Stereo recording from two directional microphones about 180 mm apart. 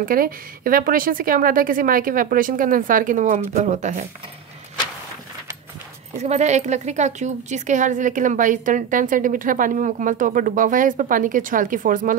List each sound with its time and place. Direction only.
0.0 s a woman's voice: 50° right (ahead or behind)
6.2 s a woman's voice: 40° right (ahead or behind)